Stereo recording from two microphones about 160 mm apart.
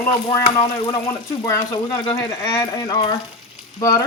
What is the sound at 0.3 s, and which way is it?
Speech, 25° left (ahead or behind).